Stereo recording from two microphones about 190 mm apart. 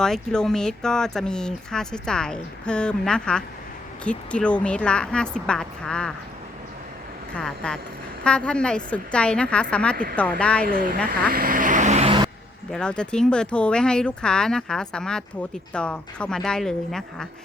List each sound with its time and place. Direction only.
0.0 s speech: 5° left (ahead or behind)
7.3 s speech: 5° left (ahead or behind)
11.1 s vehicle: 50° right (ahead or behind); by 12.3 s 25° right (ahead or behind)
12.7 s speech: 5° left (ahead or behind)